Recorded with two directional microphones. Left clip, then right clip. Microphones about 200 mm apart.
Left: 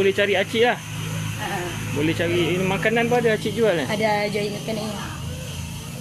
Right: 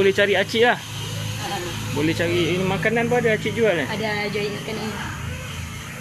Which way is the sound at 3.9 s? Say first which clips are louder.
Left 3 dB; 50° left (ahead or behind).